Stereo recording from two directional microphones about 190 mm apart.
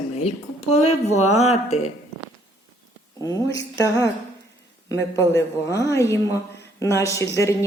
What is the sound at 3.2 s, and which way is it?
Speech, 15° left (ahead or behind).